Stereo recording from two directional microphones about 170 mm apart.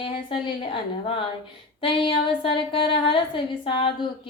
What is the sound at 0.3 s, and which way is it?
A woman's voice, 30° left (ahead or behind).